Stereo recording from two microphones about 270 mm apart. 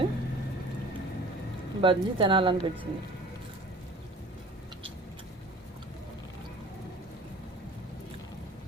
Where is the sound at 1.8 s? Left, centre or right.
Centre.